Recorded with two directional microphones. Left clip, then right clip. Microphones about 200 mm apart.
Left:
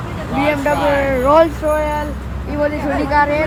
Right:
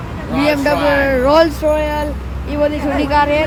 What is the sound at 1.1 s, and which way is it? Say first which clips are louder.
Speech: left 2 dB; 10° right (ahead or behind).